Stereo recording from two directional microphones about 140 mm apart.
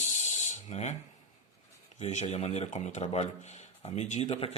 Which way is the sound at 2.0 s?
55° left (ahead or behind).